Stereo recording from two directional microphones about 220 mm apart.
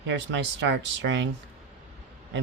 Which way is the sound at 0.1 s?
55° right (ahead or behind).